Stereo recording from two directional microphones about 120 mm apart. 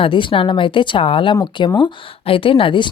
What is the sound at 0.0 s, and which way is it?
A woman's voice, 45° left (ahead or behind).